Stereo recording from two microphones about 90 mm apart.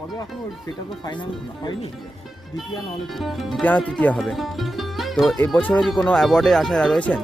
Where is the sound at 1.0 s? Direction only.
55° left (ahead or behind).